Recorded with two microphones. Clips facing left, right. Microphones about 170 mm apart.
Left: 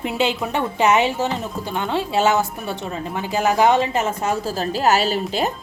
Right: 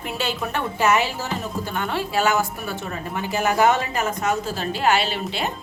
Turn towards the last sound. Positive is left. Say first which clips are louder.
# left 4 dB
turn(degrees=40)  # may be behind; listen again after turning